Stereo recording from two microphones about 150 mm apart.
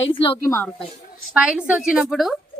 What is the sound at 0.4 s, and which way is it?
Speech, 20° left (ahead or behind).